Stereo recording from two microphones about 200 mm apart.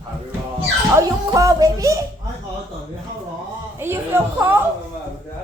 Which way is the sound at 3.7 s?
10° right (ahead or behind).